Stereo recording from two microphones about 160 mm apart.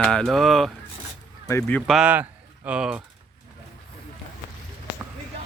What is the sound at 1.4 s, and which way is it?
Speech, 15° left (ahead or behind).